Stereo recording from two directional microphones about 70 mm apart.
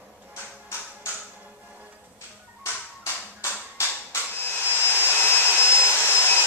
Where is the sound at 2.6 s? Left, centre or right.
Left.